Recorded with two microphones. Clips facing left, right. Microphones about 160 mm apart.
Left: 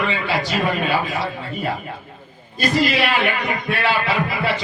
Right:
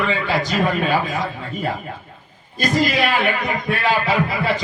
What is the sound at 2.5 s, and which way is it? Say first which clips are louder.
A man's voice: even; 45° right (ahead or behind).